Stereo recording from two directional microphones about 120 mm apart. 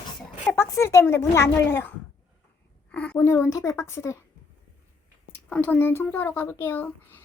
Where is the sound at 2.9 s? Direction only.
10° left (ahead or behind).